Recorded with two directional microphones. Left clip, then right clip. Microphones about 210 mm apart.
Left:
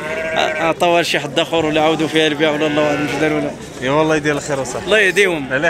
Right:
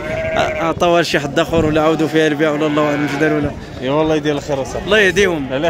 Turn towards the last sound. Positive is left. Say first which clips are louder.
# even
turn(degrees=-50)  # may be behind; listen again after turning